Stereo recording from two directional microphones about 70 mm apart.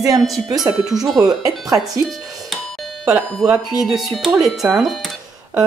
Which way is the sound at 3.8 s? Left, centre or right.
Centre.